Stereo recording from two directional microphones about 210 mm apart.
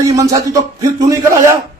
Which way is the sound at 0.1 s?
15° right (ahead or behind).